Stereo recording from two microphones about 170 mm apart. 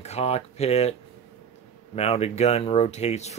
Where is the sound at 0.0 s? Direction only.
40° left (ahead or behind).